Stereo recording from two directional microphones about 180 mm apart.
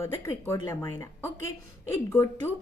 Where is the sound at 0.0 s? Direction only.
15° left (ahead or behind).